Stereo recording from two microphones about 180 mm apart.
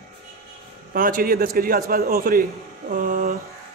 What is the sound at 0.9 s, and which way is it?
A man's voice, 50° right (ahead or behind).